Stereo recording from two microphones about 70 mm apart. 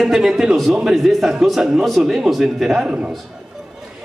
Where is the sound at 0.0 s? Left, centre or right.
Centre.